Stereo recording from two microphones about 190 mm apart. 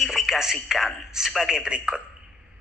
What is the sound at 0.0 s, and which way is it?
A man's voice, centre (ahead or behind).